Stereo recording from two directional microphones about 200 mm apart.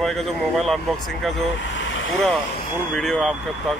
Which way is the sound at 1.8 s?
70° left (ahead or behind).